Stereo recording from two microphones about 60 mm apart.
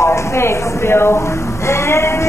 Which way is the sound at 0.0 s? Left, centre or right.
Left.